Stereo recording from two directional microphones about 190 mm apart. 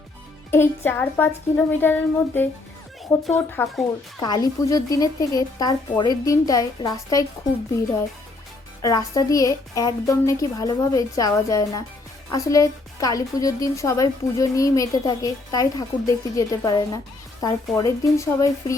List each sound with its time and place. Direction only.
0.5 s a woman's voice: 10° left (ahead or behind)
3.0 s a woman's voice: centre (ahead or behind)
4.2 s speech: 20° left (ahead or behind)
8.8 s a woman's voice: 20° left (ahead or behind)